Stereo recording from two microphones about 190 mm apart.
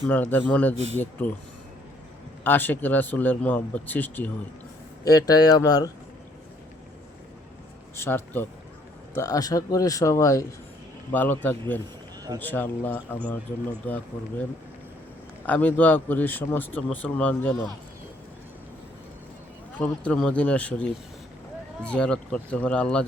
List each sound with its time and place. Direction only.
0.1 s speech: 10° left (ahead or behind)
2.4 s speech: 10° left (ahead or behind)
7.9 s speech: 10° left (ahead or behind)
15.4 s speech: 10° left (ahead or behind)
19.8 s speech: 5° left (ahead or behind)